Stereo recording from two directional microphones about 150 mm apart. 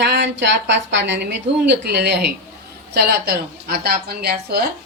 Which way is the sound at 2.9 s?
90° right.